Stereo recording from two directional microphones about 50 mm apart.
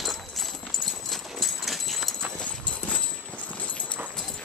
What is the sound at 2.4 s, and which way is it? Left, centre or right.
Clip-clop, left.